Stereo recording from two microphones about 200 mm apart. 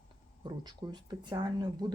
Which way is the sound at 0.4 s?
20° right (ahead or behind).